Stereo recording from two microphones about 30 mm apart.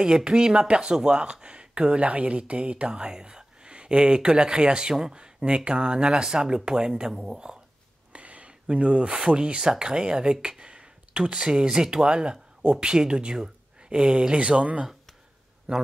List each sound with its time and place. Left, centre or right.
0.0 s speech: right
3.0 s speech: right
8.1 s a sound: right
9.1 s speech: right
10.6 s a sound: right
11.3 s speech: right